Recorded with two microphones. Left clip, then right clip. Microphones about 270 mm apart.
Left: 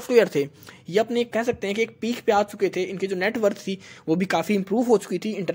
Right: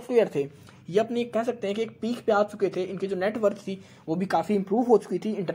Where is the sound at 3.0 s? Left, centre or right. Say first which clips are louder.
Left 2 dB; left.